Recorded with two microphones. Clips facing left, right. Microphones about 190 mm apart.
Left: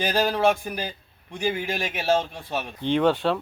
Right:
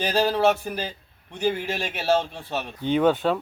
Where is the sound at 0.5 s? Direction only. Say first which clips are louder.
Right 1 dB; 10° left (ahead or behind).